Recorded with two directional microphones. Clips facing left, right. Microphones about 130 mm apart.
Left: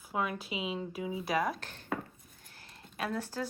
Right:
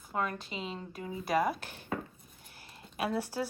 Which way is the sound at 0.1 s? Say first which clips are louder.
Even; 5° left (ahead or behind).